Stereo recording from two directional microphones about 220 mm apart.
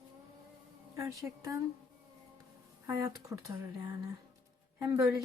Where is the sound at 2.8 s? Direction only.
15° right (ahead or behind).